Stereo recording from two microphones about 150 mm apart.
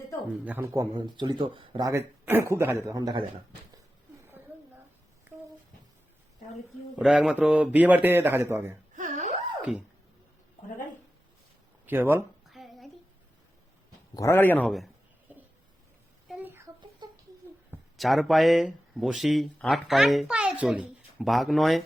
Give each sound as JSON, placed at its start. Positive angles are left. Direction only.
{"t": 0.4, "sound": "a man's voice", "side_deg": -15}
{"t": 0.9, "sound": "speech", "side_deg": -30}
{"t": 1.9, "sound": "speech", "side_deg": -15}
{"t": 6.9, "sound": "a man's voice", "side_deg": -5}
{"t": 9.0, "sound": "a sound", "side_deg": -55}
{"t": 11.9, "sound": "a man's voice", "side_deg": -15}
{"t": 12.5, "sound": "child singing", "side_deg": 0}
{"t": 14.1, "sound": "a man's voice", "side_deg": 20}
{"t": 16.3, "sound": "a sound", "side_deg": -15}
{"t": 17.9, "sound": "speech", "side_deg": 0}